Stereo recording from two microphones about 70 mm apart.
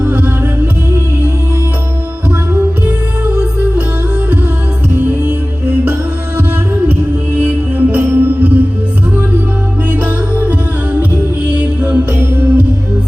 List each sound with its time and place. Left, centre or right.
0.0 s music: right
2.5 s music: right
4.9 s music: right
9.9 s music: right
11.5 s music: right
12.1 s music: right